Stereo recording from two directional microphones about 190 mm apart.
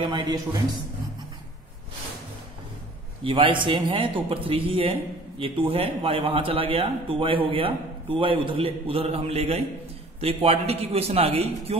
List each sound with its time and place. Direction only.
0.0 s a man's voice: 20° right (ahead or behind)
3.3 s a man's voice: 25° right (ahead or behind)